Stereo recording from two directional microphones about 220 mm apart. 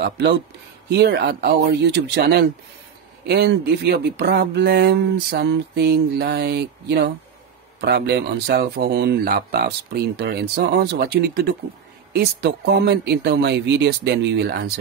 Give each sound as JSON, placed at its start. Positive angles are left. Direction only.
{"t": 0.0, "sound": "speech", "side_deg": -50}